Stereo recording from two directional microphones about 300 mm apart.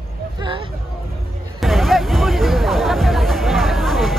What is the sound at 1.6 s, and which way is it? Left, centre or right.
Hubbub, centre.